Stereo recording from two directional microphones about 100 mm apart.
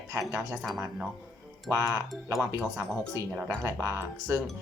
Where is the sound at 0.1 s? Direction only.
30° right (ahead or behind).